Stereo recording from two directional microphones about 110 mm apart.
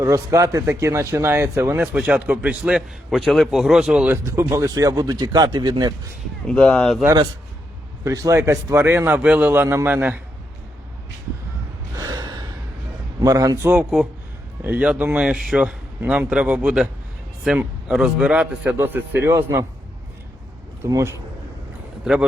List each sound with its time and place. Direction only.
0.0 s speech: 30° right (ahead or behind); by 4.1 s 5° right (ahead or behind)
4.1 s speech: 25° right (ahead or behind); by 5.9 s 40° right (ahead or behind)
6.5 s speech: 5° left (ahead or behind)
8.0 s a man's voice: 30° right (ahead or behind)
11.9 s gasp: 35° right (ahead or behind)
13.2 s speech: 35° right (ahead or behind)
13.9 s speech: 10° right (ahead or behind); by 19.6 s 25° right (ahead or behind)
20.8 s a man's voice: 25° right (ahead or behind)
22.0 s speech: 5° right (ahead or behind)